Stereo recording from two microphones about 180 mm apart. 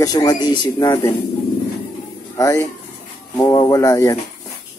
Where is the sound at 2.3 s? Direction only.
15° left (ahead or behind).